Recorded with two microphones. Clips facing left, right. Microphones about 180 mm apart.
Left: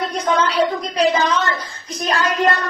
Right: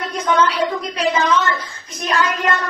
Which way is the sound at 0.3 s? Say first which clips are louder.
Right 2 dB; 35° left (ahead or behind).